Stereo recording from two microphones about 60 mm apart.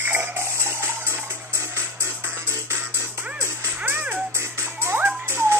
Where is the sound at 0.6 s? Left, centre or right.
Right.